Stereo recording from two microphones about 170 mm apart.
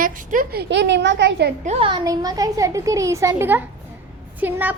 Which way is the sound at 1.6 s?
35° right (ahead or behind).